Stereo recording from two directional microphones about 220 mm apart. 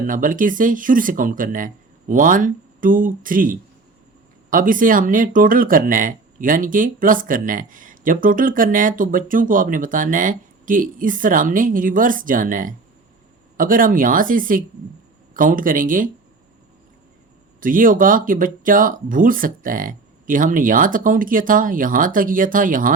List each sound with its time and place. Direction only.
0.0 s speech: 35° right (ahead or behind)
17.6 s speech: 40° right (ahead or behind)